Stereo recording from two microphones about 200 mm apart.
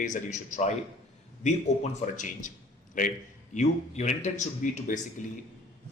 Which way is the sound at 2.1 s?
40° left (ahead or behind).